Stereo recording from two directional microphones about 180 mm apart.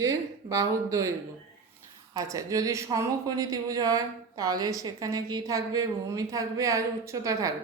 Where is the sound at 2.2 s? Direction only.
20° right (ahead or behind).